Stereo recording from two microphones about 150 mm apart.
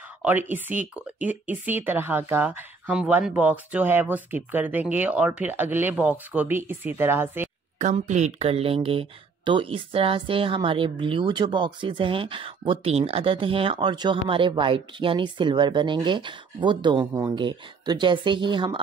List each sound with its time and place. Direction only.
0.2 s speech: 10° right (ahead or behind)
7.8 s speech: 50° right (ahead or behind); by 17.0 s 30° right (ahead or behind)
17.0 s speech: 20° right (ahead or behind)
17.4 s speech: 30° right (ahead or behind)